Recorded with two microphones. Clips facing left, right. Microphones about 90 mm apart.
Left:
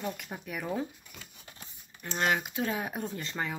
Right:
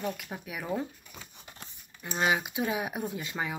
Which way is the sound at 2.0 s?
10° right (ahead or behind).